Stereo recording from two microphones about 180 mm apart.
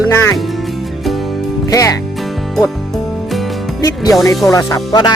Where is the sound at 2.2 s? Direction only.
Centre (ahead or behind).